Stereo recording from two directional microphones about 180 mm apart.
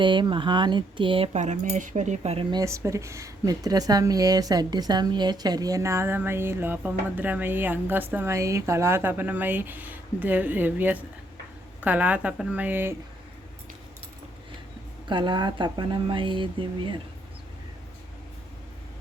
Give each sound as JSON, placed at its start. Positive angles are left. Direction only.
{"t": 0.0, "sound": "speech", "side_deg": -25}
{"t": 15.0, "sound": "speech", "side_deg": -25}